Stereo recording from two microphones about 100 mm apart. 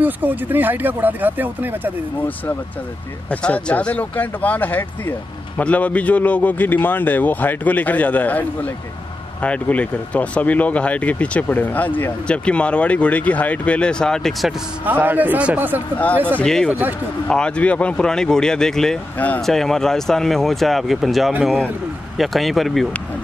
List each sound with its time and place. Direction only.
0.0 s speech: 20° right (ahead or behind)
3.3 s speech: 10° left (ahead or behind)
14.9 s a man's voice: 15° right (ahead or behind)
16.3 s speech: 5° left (ahead or behind)
19.1 s speech: 15° left (ahead or behind)
19.4 s speech: 5° left (ahead or behind)